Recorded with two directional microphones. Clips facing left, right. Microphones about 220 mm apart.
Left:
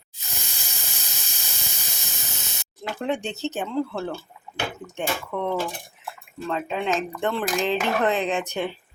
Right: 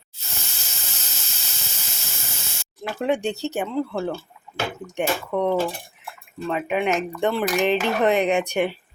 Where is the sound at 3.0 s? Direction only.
10° right (ahead or behind).